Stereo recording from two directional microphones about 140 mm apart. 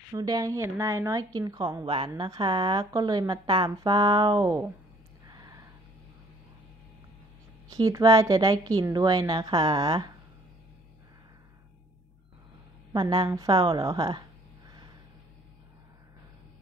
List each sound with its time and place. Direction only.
0.1 s a woman's voice: 25° right (ahead or behind)
1.9 s a woman's voice: 35° right (ahead or behind)
5.3 s a sound: 25° right (ahead or behind)
7.7 s a woman's voice: 25° right (ahead or behind)
12.9 s a woman's voice: 30° right (ahead or behind)